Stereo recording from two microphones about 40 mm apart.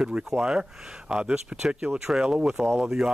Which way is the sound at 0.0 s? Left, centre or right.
Centre.